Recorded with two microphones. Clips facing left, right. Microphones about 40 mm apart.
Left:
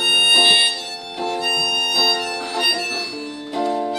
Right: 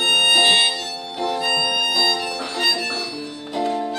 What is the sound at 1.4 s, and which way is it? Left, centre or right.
Music, right.